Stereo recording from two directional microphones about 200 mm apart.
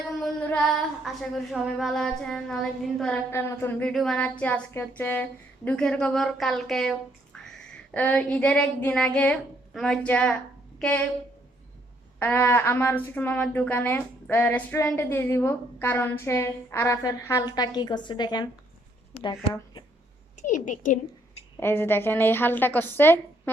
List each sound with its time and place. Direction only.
0.2 s a sound: 5° left (ahead or behind)
1.0 s a woman's voice: centre (ahead or behind)
7.3 s a sound: 5° left (ahead or behind)
7.9 s a woman's voice: 5° left (ahead or behind)
12.2 s a woman's voice: 10° left (ahead or behind)
20.3 s a woman's voice: 40° left (ahead or behind)
21.6 s speech: 10° left (ahead or behind)